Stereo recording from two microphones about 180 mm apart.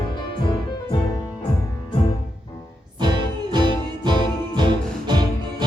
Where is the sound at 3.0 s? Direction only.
25° right (ahead or behind).